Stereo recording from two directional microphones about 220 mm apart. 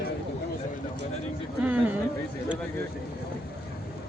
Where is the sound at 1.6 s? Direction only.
5° right (ahead or behind).